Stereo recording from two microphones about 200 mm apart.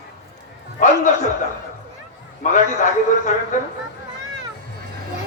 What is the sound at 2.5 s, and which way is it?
Speech, 40° left (ahead or behind).